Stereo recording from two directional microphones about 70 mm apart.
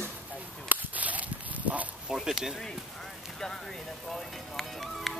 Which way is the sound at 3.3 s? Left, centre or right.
Centre.